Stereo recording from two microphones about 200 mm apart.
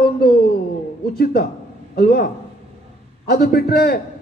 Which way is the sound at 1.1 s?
50° left (ahead or behind).